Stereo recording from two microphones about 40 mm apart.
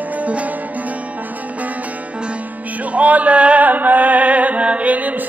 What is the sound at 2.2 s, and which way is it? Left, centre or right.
Music, right.